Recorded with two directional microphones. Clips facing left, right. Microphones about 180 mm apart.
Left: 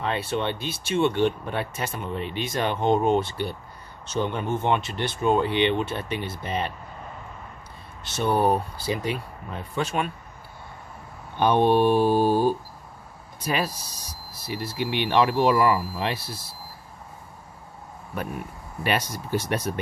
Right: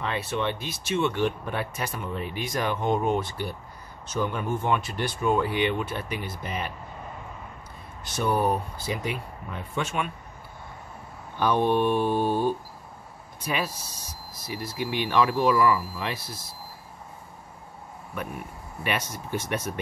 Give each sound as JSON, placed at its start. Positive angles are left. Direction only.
{"t": 0.1, "sound": "speech", "side_deg": 30}
{"t": 8.0, "sound": "speech", "side_deg": 25}
{"t": 11.3, "sound": "speech", "side_deg": 25}
{"t": 18.8, "sound": "speech", "side_deg": 35}